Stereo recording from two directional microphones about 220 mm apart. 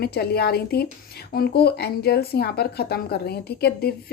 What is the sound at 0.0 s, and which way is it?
Speech, 45° left (ahead or behind).